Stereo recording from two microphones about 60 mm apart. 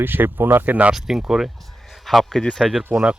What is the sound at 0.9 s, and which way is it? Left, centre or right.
Speech, centre.